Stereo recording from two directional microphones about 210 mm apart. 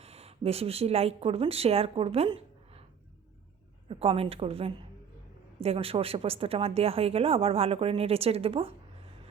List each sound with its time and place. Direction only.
0.0 s speech: 30° right (ahead or behind)
3.8 s speech: 25° right (ahead or behind)